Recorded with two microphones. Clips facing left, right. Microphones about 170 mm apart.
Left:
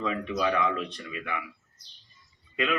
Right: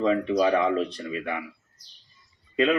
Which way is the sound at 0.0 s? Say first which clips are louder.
Right 7 dB; 35° right (ahead or behind).